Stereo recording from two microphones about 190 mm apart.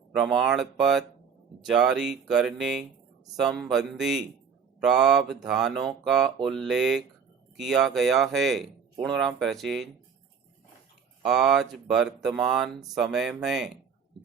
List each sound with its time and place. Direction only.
0.1 s speech: centre (ahead or behind)
11.2 s speech: centre (ahead or behind)